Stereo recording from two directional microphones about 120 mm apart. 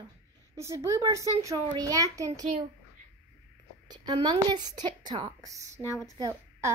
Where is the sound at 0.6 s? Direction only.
25° right (ahead or behind).